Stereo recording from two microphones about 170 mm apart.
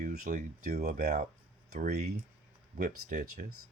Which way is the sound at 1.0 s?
45° right (ahead or behind).